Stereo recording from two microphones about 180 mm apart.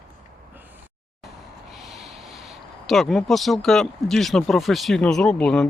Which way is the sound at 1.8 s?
Centre (ahead or behind).